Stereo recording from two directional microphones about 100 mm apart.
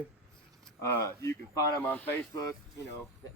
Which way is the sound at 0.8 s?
30° left (ahead or behind).